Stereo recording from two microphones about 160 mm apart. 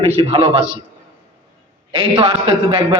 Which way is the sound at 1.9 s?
30° right (ahead or behind).